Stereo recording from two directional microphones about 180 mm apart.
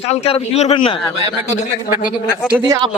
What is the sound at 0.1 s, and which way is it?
Speech, 35° left (ahead or behind).